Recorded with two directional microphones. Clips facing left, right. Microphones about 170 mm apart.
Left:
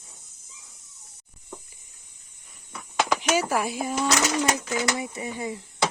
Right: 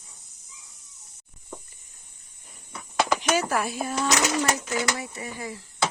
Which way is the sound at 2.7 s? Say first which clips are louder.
Right 1 dB; centre (ahead or behind).